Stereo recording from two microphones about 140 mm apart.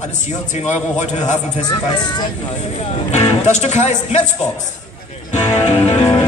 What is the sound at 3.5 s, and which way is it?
Speech, 55° left (ahead or behind).